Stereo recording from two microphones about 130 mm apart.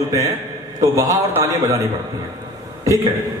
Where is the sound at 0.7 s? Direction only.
25° right (ahead or behind).